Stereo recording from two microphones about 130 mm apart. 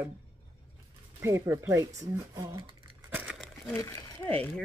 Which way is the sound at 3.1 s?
10° right (ahead or behind).